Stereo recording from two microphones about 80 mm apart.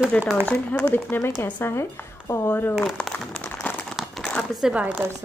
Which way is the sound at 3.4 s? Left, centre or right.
Left.